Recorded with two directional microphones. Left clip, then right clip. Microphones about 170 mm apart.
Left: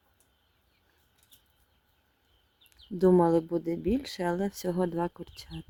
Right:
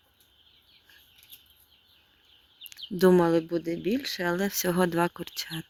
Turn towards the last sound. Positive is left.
turn(degrees=0)  # may be behind; listen again after turning